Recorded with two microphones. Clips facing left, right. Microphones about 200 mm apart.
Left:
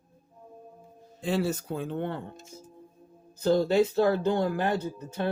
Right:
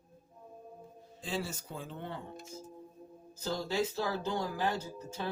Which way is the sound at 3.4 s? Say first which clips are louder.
Left 11 dB; 55° left (ahead or behind).